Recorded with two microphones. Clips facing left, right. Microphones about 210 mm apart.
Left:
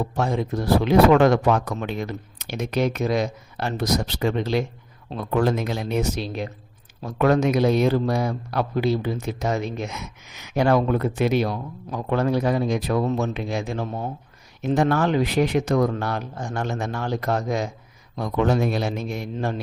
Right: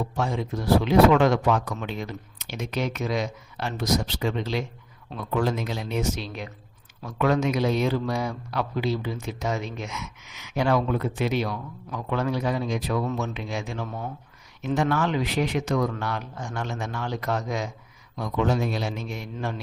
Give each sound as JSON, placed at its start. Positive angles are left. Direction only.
{"t": 0.2, "sound": "speech", "side_deg": 55}
{"t": 2.8, "sound": "speech", "side_deg": 40}
{"t": 3.8, "sound": "speech", "side_deg": 60}
{"t": 6.1, "sound": "speech", "side_deg": 35}
{"t": 7.3, "sound": "speech", "side_deg": 55}
{"t": 8.0, "sound": "speech", "side_deg": 35}
{"t": 9.7, "sound": "speech", "side_deg": 35}
{"t": 11.5, "sound": "speech", "side_deg": 35}
{"t": 13.0, "sound": "speech", "side_deg": 35}
{"t": 15.2, "sound": "speech", "side_deg": 50}
{"t": 15.7, "sound": "speech", "side_deg": 40}
{"t": 16.6, "sound": "speech", "side_deg": 50}
{"t": 18.3, "sound": "speech", "side_deg": 60}
{"t": 19.0, "sound": "speech", "side_deg": 40}